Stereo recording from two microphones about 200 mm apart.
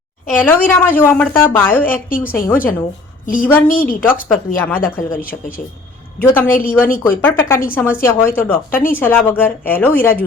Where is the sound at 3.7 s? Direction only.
45° left (ahead or behind).